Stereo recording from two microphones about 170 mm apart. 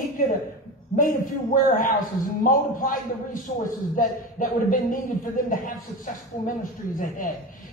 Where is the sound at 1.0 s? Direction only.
55° left (ahead or behind).